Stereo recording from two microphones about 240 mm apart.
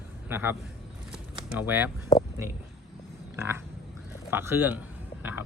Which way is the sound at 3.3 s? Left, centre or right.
Centre.